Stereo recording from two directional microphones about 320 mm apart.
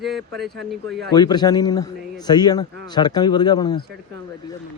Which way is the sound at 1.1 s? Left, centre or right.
Centre.